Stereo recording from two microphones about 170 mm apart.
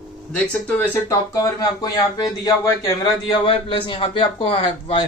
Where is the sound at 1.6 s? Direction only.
20° left (ahead or behind).